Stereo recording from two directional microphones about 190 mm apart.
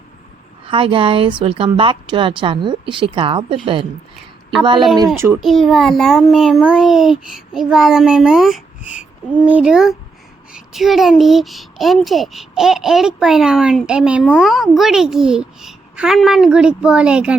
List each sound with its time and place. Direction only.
0.7 s a woman's voice: 25° right (ahead or behind)
4.6 s a woman's voice: 25° right (ahead or behind)
5.1 s a child's voice: 15° right (ahead or behind)
5.4 s speech: centre (ahead or behind)